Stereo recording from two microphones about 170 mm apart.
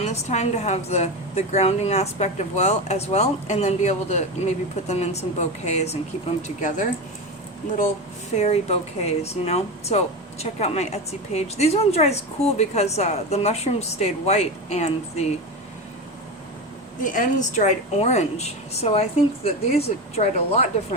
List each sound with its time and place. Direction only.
0.0 s speech: 40° left (ahead or behind)
8.4 s speech: 40° left (ahead or behind)
17.0 s speech: 50° left (ahead or behind)